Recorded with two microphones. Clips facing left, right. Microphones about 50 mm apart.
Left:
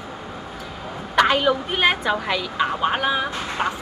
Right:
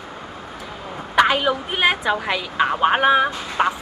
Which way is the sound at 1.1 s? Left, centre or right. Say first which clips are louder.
Right 1 dB; centre.